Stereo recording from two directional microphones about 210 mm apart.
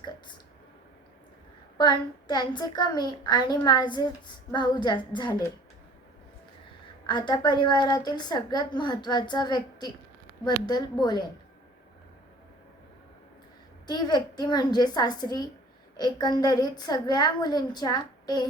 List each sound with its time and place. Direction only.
1.8 s a woman's voice: 20° left (ahead or behind)
7.1 s a woman's voice: 20° left (ahead or behind)
13.8 s a woman's voice: 20° left (ahead or behind)